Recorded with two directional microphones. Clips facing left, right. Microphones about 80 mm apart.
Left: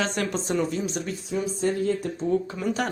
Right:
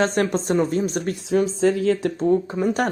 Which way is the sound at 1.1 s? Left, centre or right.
Right.